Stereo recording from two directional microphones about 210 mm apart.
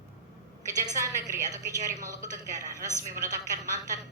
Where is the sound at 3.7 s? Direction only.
15° right (ahead or behind).